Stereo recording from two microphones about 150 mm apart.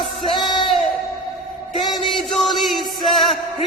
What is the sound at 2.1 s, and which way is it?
Music, centre (ahead or behind).